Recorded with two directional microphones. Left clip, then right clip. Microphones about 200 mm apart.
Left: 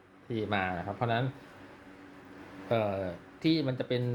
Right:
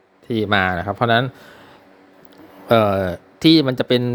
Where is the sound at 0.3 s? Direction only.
50° right (ahead or behind).